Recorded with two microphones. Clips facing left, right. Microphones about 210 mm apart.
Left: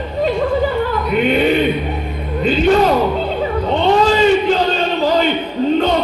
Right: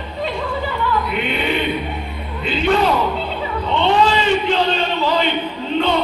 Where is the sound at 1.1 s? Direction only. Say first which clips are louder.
Left 7 dB; 45° left (ahead or behind).